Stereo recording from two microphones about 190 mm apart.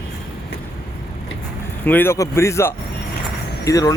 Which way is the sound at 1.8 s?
10° left (ahead or behind).